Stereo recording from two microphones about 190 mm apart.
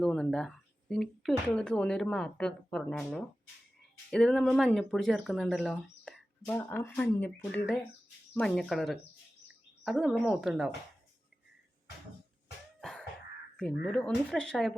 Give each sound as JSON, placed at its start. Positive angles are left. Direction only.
{"t": 0.0, "sound": "speech", "side_deg": 5}
{"t": 12.8, "sound": "a sound", "side_deg": 0}
{"t": 13.6, "sound": "speech", "side_deg": 5}